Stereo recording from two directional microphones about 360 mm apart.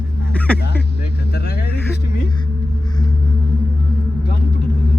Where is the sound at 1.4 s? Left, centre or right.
Left.